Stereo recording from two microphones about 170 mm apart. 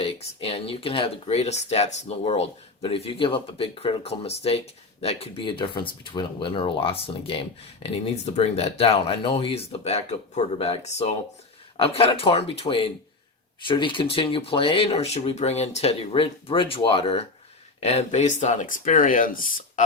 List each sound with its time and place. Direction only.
0.0 s speech: 35° left (ahead or behind); by 19.8 s 55° left (ahead or behind)